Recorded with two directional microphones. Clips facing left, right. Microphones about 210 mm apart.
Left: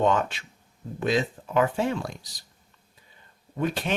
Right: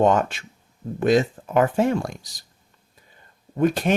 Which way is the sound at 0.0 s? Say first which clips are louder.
Right 5 dB; 45° right (ahead or behind).